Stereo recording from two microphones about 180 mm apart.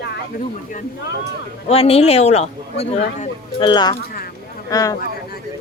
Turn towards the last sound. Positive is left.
turn(degrees=20)  # may be behind; listen again after turning